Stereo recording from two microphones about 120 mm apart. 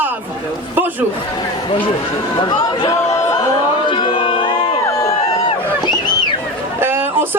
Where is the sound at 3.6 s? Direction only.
40° left (ahead or behind).